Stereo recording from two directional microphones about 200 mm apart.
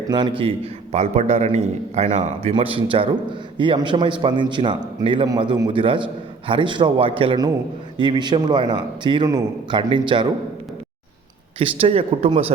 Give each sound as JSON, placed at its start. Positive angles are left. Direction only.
{"t": 0.1, "sound": "a man's voice", "side_deg": -25}
{"t": 11.6, "sound": "a man's voice", "side_deg": -30}